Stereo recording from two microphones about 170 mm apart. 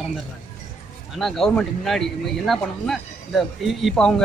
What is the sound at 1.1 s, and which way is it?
Speech, centre (ahead or behind).